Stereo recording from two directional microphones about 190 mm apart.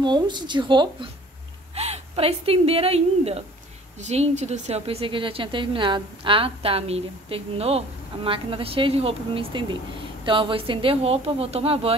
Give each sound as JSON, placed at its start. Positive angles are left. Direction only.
{"t": 0.0, "sound": "a woman's voice", "side_deg": -25}